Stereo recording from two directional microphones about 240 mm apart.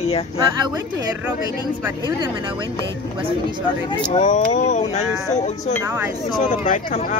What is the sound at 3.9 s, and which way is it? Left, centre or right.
Speech, left.